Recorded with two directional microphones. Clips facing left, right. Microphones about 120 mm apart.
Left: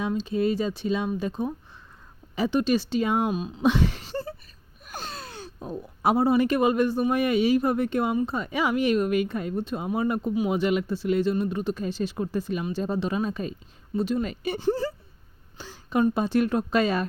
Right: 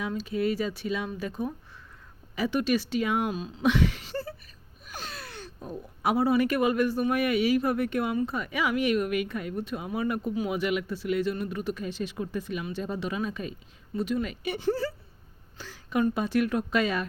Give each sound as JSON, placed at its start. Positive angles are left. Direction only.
{"t": 0.0, "sound": "speech", "side_deg": 25}
{"t": 3.3, "sound": "speech", "side_deg": 20}
{"t": 3.6, "sound": "a sound", "side_deg": 30}
{"t": 4.1, "sound": "a sound", "side_deg": 25}
{"t": 4.9, "sound": "speech", "side_deg": 25}
{"t": 14.7, "sound": "speech", "side_deg": 20}